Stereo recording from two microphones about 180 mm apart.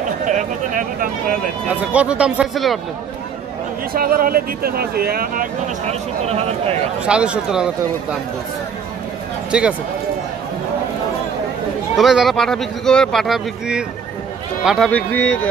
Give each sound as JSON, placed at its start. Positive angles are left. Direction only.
{"t": 0.3, "sound": "speech", "side_deg": -45}
{"t": 1.9, "sound": "speech", "side_deg": -5}
{"t": 3.9, "sound": "speech", "side_deg": -55}
{"t": 6.2, "sound": "speech", "side_deg": -35}
{"t": 7.1, "sound": "speech", "side_deg": -5}
{"t": 9.5, "sound": "speech", "side_deg": -5}
{"t": 12.0, "sound": "speech", "side_deg": 0}
{"t": 14.9, "sound": "speech", "side_deg": 10}